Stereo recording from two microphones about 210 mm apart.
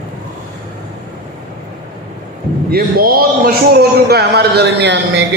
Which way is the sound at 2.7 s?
45° right (ahead or behind).